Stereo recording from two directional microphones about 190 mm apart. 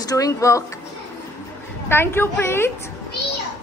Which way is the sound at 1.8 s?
10° left (ahead or behind).